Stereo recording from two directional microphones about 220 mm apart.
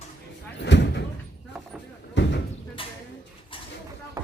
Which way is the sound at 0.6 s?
50° left (ahead or behind).